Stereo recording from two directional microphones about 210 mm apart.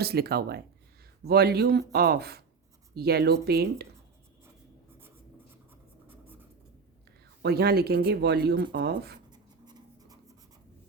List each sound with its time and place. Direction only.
0.0 s speech: 50° right (ahead or behind)
6.1 s writing: 10° right (ahead or behind)
7.4 s speech: 50° right (ahead or behind)
9.3 s writing: 20° right (ahead or behind)